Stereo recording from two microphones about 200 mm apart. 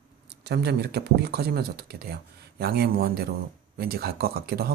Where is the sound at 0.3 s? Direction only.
55° right (ahead or behind).